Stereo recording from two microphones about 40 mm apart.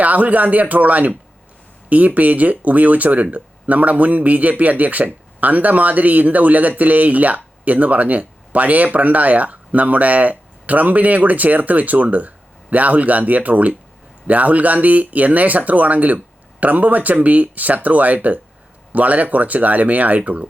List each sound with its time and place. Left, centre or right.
0.0 s a man's voice: right